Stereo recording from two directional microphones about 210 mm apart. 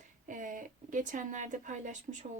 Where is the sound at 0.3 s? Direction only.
40° right (ahead or behind).